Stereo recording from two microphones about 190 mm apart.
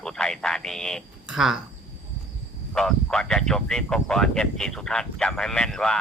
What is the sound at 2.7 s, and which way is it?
Speech, 5° left (ahead or behind).